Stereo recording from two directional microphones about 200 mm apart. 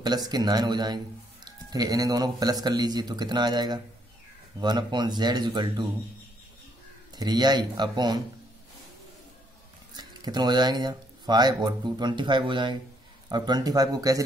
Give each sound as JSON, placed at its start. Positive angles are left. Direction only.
{"t": 0.0, "sound": "a man's voice", "side_deg": -20}
{"t": 7.2, "sound": "a man's voice", "side_deg": -20}
{"t": 9.9, "sound": "a man's voice", "side_deg": -20}